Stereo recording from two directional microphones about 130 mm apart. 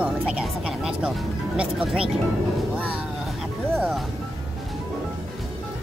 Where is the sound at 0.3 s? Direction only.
5° right (ahead or behind).